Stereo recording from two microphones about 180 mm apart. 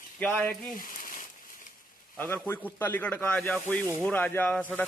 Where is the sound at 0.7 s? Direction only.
50° left (ahead or behind).